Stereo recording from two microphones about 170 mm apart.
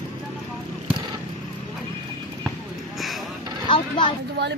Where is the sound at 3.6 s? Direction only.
30° left (ahead or behind).